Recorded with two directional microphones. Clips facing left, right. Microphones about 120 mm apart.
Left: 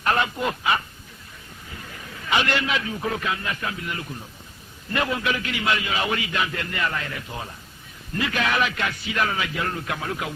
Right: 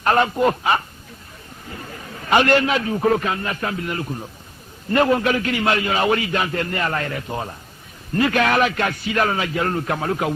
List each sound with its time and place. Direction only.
0.0 s a man's voice: 40° right (ahead or behind)
2.2 s a man's voice: 45° right (ahead or behind)